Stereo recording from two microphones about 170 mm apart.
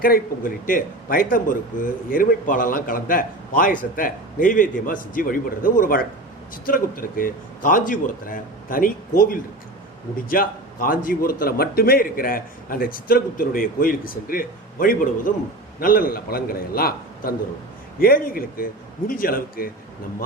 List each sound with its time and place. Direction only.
0.0 s a man's voice: 55° left (ahead or behind)